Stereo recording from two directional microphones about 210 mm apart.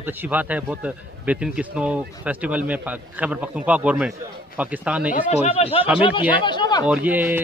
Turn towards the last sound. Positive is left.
turn(degrees=-10)  # may be behind; listen again after turning